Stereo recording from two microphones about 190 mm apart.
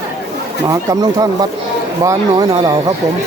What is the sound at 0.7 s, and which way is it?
Speech, 20° right (ahead or behind).